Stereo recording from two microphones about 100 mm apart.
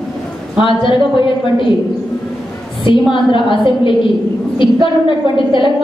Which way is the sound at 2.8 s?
60° left (ahead or behind).